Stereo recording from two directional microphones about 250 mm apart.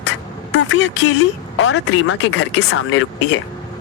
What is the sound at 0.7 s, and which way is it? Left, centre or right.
Speech, left.